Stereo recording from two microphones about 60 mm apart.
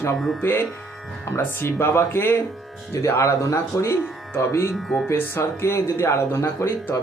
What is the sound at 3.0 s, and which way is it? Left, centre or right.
Speech, left.